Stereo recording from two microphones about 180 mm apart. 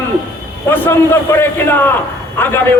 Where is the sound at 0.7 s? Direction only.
10° left (ahead or behind).